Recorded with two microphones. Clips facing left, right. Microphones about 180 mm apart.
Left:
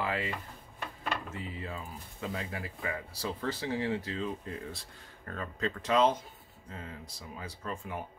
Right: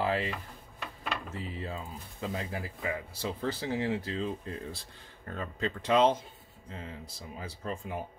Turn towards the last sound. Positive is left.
turn(degrees=-30)  # may be behind; listen again after turning